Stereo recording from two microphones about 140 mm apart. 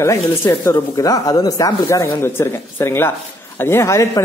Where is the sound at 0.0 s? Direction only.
20° left (ahead or behind).